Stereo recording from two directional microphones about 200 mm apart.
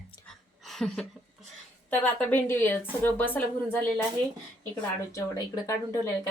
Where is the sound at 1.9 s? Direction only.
10° left (ahead or behind).